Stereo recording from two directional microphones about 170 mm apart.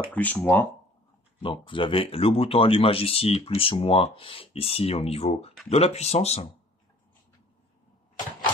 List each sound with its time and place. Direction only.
0.1 s speech: 10° left (ahead or behind)
1.4 s speech: 30° left (ahead or behind)